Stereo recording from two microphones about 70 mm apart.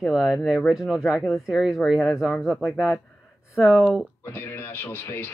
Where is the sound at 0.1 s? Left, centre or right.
Centre.